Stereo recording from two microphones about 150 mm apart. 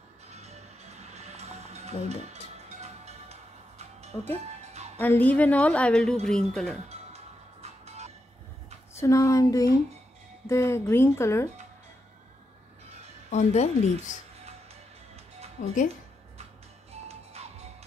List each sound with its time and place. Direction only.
0.3 s music: 45° right (ahead or behind)
4.9 s a woman's voice: 10° left (ahead or behind)
7.6 s music: 45° right (ahead or behind)
8.9 s speech: 20° left (ahead or behind)
13.3 s speech: 50° left (ahead or behind)
14.4 s music: 45° right (ahead or behind)